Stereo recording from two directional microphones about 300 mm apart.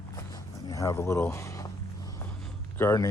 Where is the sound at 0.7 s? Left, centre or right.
Centre.